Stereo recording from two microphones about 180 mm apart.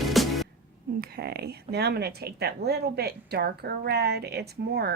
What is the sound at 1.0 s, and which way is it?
Speech, 60° right (ahead or behind).